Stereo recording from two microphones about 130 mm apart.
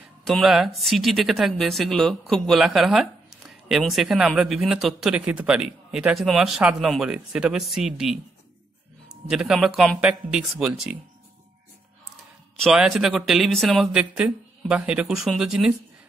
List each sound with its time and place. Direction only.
0.2 s speech: centre (ahead or behind)
12.5 s speech: centre (ahead or behind)